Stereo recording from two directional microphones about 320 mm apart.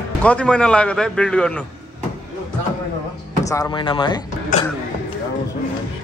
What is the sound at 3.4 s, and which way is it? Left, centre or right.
Speech, centre.